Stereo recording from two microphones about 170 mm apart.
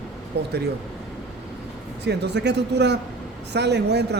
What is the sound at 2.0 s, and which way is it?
Speech, 85° right.